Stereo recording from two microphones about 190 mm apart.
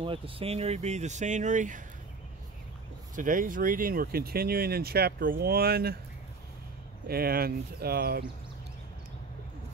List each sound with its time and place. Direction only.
0.0 s speech: 30° right (ahead or behind)
3.2 s speech: 45° right (ahead or behind)
7.1 s speech: 55° right (ahead or behind)